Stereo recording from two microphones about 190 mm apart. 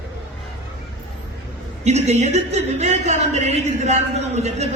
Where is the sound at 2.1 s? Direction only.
35° right (ahead or behind).